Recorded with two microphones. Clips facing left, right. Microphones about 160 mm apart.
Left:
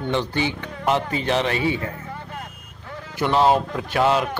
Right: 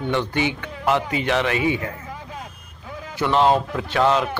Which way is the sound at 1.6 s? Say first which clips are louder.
Right 1 dB; 15° right (ahead or behind).